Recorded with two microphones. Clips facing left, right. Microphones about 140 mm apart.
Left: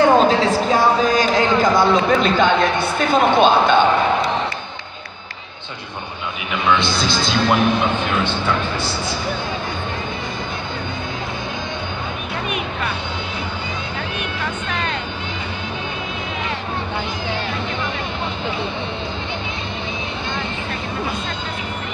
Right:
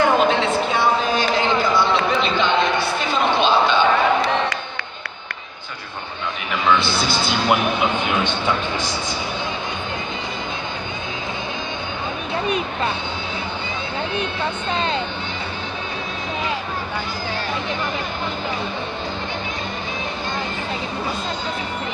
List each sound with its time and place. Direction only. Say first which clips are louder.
0.0 s a sound: left 3 dB; 35° left (ahead or behind); by 3.8 s 50° left (ahead or behind)
6.8 s speech: left 1 dB; 10° right (ahead or behind)
12.4 s speech: right 3 dB; 30° right (ahead or behind)
14.7 s speech: right 4 dB; 30° right (ahead or behind)